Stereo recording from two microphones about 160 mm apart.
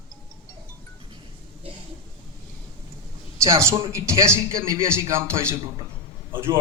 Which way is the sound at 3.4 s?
20° right (ahead or behind).